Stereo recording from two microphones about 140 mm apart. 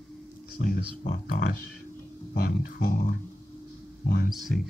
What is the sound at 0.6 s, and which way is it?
A man's voice, 90° left.